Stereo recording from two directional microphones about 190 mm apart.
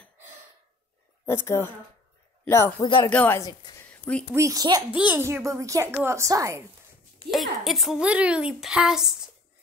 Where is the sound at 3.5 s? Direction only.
20° left (ahead or behind).